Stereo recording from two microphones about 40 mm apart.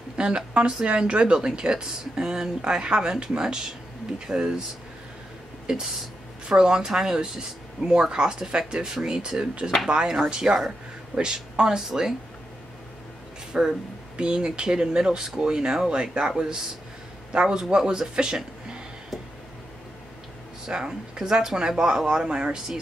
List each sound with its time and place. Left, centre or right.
0.2 s speech: right
5.7 s speech: right
13.5 s speech: centre
14.1 s speech: right
20.6 s speech: right